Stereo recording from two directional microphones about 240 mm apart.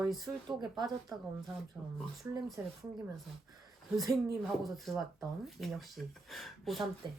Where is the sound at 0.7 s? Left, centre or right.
Centre.